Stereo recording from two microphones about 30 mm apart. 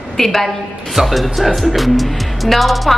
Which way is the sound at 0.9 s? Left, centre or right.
Centre.